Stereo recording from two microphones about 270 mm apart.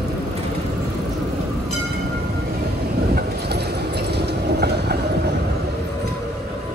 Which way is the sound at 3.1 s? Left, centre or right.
Right.